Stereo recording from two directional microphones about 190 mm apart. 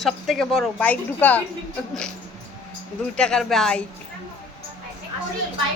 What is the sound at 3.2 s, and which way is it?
Speech, 5° left (ahead or behind).